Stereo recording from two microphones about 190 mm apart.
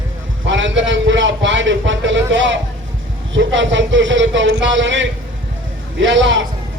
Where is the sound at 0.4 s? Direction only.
80° right.